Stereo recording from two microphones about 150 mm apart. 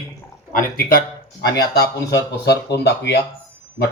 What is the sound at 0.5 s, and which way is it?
Speech, 75° left (ahead or behind).